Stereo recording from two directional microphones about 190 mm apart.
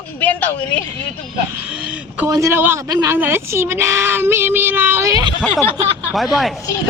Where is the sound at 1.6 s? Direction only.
5° right (ahead or behind).